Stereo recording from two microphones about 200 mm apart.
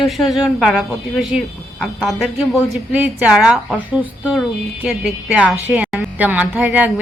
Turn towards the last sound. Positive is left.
turn(degrees=-10)  # may be behind; listen again after turning